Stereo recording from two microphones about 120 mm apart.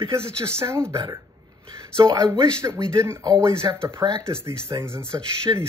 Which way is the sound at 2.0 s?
30° right (ahead or behind).